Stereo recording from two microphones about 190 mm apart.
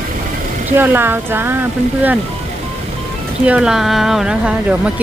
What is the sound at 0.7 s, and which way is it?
Speech, 10° right (ahead or behind).